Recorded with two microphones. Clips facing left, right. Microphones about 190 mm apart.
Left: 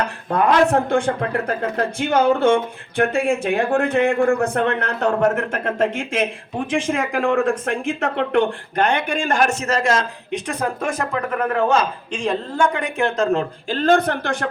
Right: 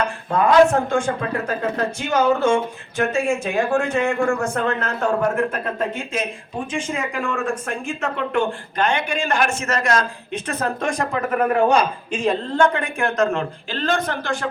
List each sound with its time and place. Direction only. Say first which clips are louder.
0.4 s a man's voice: right 2 dB; 35° left (ahead or behind)
0.9 s a man's voice: left 2 dB; 60° left (ahead or behind); by 11.2 s 5° left (ahead or behind)
11.3 s a man's voice: right 2 dB; 10° right (ahead or behind)
12.5 s speech: even; 10° left (ahead or behind); by 13.4 s 30° left (ahead or behind)
13.7 s speech: left 7 dB; 50° left (ahead or behind)